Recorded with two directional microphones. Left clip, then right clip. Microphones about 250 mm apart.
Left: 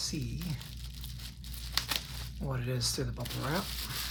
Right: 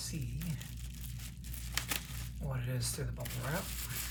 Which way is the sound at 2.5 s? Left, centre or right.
Left.